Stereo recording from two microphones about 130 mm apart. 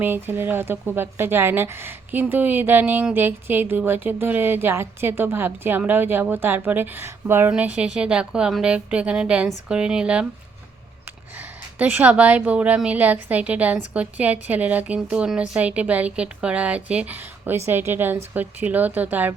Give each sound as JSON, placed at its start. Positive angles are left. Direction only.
{"t": 0.0, "sound": "a woman's voice", "side_deg": -15}
{"t": 11.3, "sound": "a woman's voice", "side_deg": -10}